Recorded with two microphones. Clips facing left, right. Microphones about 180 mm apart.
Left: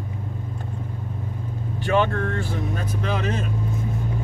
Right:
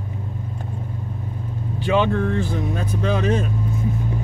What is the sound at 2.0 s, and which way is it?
Speech, 15° right (ahead or behind).